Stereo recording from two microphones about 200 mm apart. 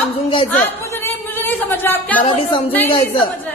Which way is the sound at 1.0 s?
10° left (ahead or behind).